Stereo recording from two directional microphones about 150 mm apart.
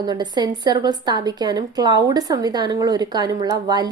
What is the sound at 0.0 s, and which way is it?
A woman's voice, 30° right (ahead or behind).